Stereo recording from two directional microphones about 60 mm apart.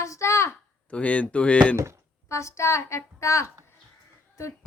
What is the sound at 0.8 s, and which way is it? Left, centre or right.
Speech, left.